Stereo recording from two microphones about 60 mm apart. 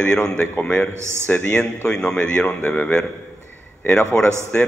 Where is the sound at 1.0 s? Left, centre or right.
Right.